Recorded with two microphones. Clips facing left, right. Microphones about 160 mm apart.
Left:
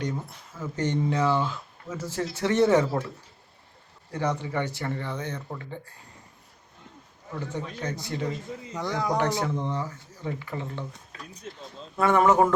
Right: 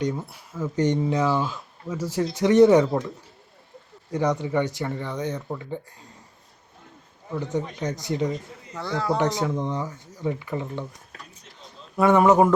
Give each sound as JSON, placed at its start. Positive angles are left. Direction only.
{"t": 0.0, "sound": "speech", "side_deg": -10}
{"t": 4.1, "sound": "speech", "side_deg": -15}
{"t": 7.3, "sound": "speech", "side_deg": -15}
{"t": 8.7, "sound": "speech", "side_deg": 15}
{"t": 9.2, "sound": "speech", "side_deg": -15}
{"t": 11.9, "sound": "speech", "side_deg": -15}